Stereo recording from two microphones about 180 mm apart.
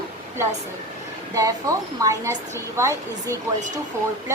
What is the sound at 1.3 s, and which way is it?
A woman's voice, 20° right (ahead or behind).